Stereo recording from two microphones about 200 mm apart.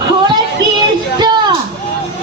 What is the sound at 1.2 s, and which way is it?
Music, 20° right (ahead or behind).